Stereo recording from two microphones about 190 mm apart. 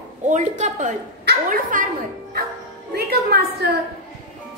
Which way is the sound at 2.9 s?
55° right (ahead or behind).